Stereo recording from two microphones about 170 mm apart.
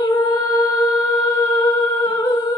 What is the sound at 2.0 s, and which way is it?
Humming, 25° left (ahead or behind).